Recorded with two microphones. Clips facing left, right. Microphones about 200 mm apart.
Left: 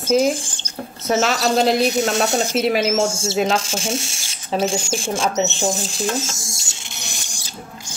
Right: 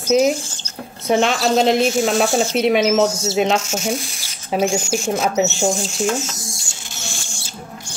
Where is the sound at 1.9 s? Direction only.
20° left (ahead or behind).